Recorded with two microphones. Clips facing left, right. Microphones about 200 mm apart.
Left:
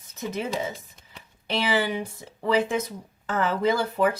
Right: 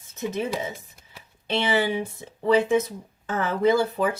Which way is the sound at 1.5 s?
25° right (ahead or behind).